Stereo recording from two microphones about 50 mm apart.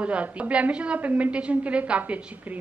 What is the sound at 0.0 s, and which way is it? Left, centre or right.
A woman's voice, right.